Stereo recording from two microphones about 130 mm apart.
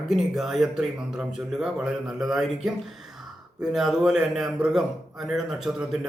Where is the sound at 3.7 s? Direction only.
5° right (ahead or behind).